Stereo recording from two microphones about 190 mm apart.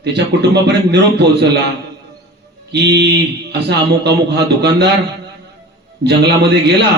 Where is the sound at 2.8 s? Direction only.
60° right (ahead or behind).